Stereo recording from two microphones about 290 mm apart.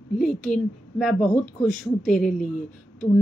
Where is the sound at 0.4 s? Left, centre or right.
Centre.